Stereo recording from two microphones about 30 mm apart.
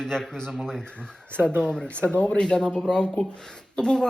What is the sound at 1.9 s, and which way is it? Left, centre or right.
Speech, left.